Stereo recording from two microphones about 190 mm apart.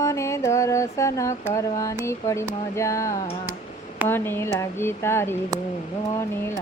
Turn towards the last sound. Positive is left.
turn(degrees=15)  # may be behind; listen again after turning